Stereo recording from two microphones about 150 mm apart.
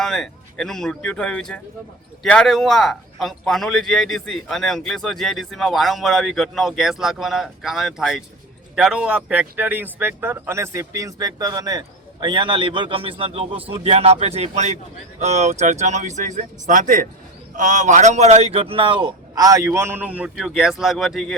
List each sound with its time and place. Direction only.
0.0 s a man's voice: 5° left (ahead or behind)
20.3 s a man's voice: centre (ahead or behind)